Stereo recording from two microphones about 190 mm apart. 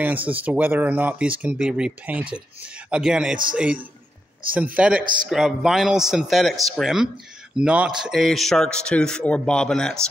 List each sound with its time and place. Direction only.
0.0 s a man's voice: 10° right (ahead or behind)
4.7 s speech: 5° right (ahead or behind)
5.0 s a man's voice: 45° right (ahead or behind)
5.3 s a man's voice: centre (ahead or behind)